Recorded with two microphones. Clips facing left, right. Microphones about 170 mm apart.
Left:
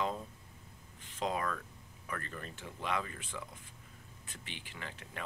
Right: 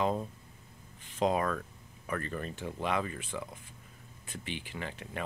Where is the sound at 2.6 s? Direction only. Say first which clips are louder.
Right 9 dB; 30° right (ahead or behind).